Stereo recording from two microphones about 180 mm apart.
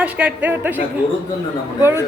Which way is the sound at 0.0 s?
10° right (ahead or behind).